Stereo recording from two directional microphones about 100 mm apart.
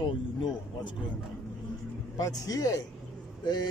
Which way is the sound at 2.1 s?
40° left (ahead or behind).